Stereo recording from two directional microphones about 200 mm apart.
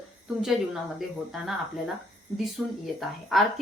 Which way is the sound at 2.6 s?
Centre (ahead or behind).